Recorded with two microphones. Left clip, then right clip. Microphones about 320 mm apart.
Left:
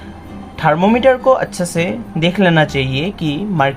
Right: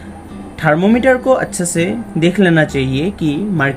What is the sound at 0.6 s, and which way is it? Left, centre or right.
Speech, centre.